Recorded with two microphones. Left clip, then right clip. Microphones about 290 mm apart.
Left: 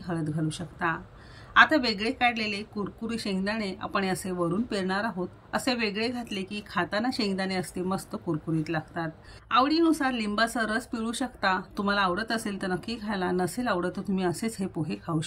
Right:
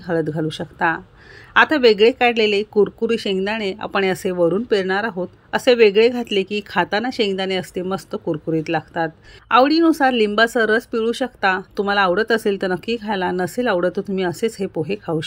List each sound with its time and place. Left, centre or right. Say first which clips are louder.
0.0 s speech: right 11 dB; centre